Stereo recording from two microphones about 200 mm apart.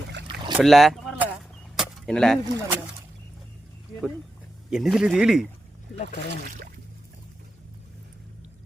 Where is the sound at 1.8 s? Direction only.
5° left (ahead or behind).